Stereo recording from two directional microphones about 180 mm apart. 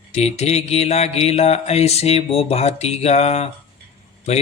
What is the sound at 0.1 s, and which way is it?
Mantra, 35° left (ahead or behind).